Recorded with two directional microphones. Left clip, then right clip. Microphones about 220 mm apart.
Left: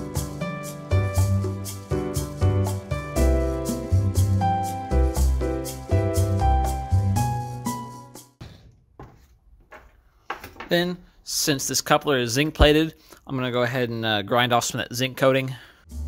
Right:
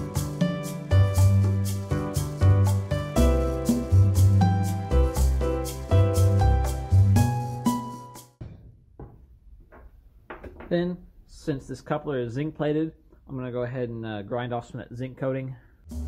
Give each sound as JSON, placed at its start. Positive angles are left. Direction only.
{"t": 0.0, "sound": "music", "side_deg": 0}
{"t": 10.7, "sound": "speech", "side_deg": 55}
{"t": 15.9, "sound": "music", "side_deg": 0}